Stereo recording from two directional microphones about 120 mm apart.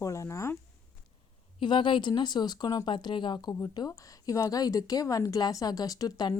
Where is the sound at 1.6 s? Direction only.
40° left (ahead or behind).